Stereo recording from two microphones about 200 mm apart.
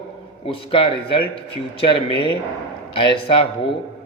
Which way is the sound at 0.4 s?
25° left (ahead or behind).